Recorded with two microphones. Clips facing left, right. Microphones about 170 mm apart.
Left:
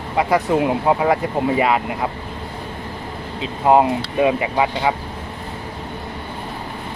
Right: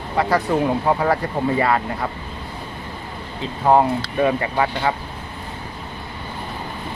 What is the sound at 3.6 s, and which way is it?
Speech, 15° left (ahead or behind).